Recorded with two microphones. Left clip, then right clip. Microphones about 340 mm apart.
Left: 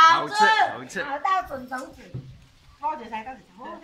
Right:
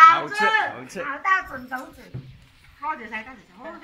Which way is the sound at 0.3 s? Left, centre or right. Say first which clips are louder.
Left 2 dB; centre.